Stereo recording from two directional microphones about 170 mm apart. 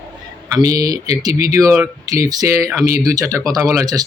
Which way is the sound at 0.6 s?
20° right (ahead or behind).